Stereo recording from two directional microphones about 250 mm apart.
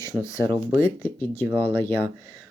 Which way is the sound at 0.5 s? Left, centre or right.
Centre.